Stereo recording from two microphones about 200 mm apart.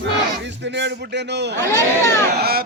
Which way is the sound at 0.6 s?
60° right (ahead or behind).